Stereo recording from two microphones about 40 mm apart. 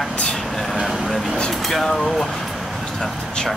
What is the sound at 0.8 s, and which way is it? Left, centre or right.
Speech, centre.